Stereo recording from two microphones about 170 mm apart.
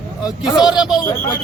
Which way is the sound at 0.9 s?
20° left (ahead or behind).